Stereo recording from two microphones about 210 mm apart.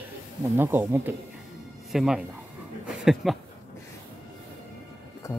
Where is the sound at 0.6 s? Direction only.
10° right (ahead or behind).